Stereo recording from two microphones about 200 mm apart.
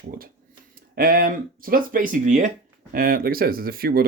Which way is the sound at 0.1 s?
45° right (ahead or behind).